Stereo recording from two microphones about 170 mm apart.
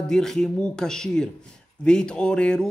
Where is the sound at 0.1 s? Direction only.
5° left (ahead or behind).